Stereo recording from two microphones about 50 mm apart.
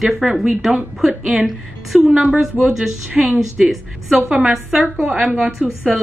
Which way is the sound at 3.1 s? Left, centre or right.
Right.